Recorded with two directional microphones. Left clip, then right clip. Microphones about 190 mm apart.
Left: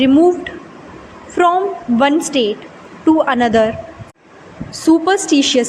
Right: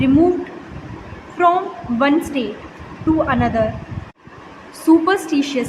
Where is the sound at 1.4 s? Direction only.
40° left (ahead or behind).